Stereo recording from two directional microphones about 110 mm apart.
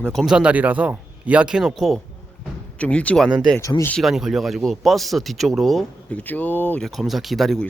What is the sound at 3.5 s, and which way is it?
Speech, 25° left (ahead or behind).